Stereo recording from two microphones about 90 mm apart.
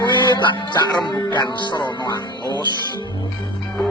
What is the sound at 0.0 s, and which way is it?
Music, 55° left (ahead or behind).